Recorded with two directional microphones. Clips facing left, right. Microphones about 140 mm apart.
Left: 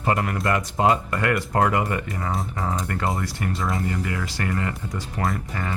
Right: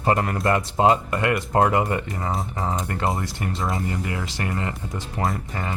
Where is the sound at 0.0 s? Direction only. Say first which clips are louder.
Right 2 dB; 35° right (ahead or behind).